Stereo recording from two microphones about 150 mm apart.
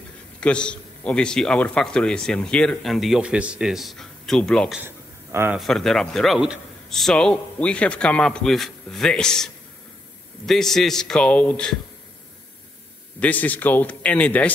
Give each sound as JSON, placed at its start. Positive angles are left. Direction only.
{"t": 0.4, "sound": "a man's voice", "side_deg": 5}
{"t": 4.7, "sound": "a sound", "side_deg": -15}
{"t": 5.6, "sound": "a man's voice", "side_deg": 5}
{"t": 13.2, "sound": "a man's voice", "side_deg": 10}